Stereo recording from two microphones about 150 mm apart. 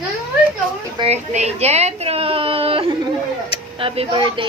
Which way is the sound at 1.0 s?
45° right (ahead or behind).